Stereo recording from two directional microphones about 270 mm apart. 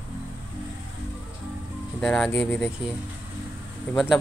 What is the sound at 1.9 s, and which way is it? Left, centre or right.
Speech, centre.